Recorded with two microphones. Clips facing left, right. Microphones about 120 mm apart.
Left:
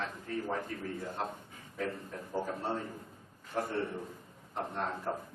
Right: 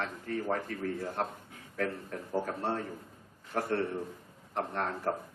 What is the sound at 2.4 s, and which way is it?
A man's voice, 70° right (ahead or behind).